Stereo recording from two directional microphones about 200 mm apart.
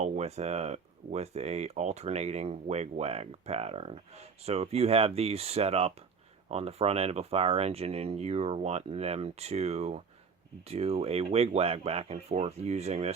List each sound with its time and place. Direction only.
0.0 s speech: 35° right (ahead or behind)